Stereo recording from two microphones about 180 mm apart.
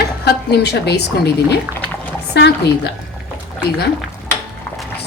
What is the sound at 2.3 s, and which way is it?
Speech, 70° left (ahead or behind).